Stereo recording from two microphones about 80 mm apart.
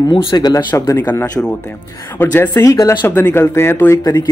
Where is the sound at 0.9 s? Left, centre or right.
Left.